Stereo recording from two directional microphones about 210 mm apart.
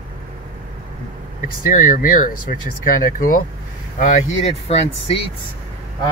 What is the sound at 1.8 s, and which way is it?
Speech, 40° left (ahead or behind).